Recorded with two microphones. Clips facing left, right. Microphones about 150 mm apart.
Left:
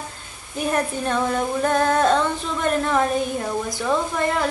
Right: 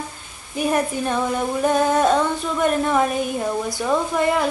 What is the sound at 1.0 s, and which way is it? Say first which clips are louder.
A woman's voice: even; 10° right (ahead or behind).